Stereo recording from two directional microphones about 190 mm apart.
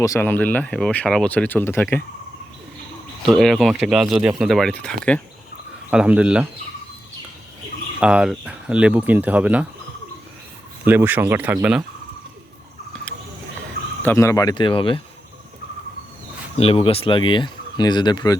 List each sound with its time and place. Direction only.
0.0 s speech: 15° left (ahead or behind)
3.2 s speech: centre (ahead or behind)
5.9 s speech: 5° right (ahead or behind)
8.0 s speech: 5° right (ahead or behind)
10.8 s speech: 10° right (ahead or behind)
14.0 s speech: 15° left (ahead or behind)
16.6 s speech: 30° left (ahead or behind)